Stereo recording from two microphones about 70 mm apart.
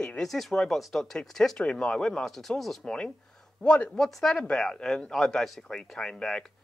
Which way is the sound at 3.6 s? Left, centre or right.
Centre.